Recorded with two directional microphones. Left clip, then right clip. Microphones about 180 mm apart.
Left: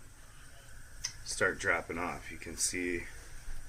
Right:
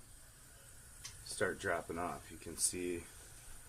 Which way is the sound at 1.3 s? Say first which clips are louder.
Left 6 dB; 35° right (ahead or behind).